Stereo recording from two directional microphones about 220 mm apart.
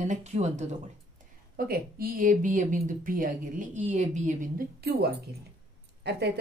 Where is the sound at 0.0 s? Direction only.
30° right (ahead or behind).